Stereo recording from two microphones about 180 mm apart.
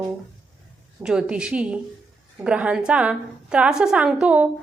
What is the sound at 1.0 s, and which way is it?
A woman's voice, 5° right (ahead or behind).